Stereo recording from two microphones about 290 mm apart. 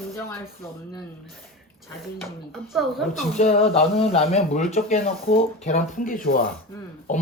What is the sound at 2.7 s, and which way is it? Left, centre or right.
Speech, centre.